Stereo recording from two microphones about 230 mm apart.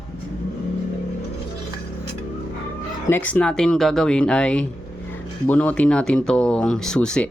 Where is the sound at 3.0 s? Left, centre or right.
Centre.